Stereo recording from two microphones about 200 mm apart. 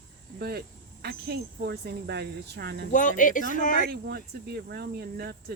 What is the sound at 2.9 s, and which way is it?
Speech, 40° left (ahead or behind).